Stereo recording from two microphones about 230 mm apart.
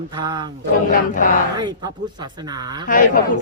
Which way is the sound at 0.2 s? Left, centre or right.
Centre.